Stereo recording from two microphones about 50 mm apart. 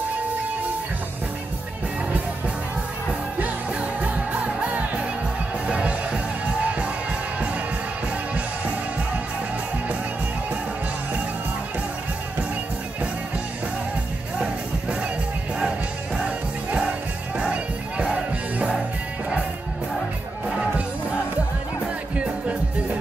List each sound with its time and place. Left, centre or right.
3.3 s music: right
14.4 s music: centre
16.3 s music: right